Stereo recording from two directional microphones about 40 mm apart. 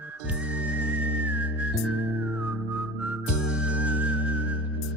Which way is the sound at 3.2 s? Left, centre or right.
Right.